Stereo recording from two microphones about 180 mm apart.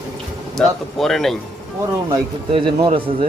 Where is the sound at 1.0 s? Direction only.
Centre (ahead or behind).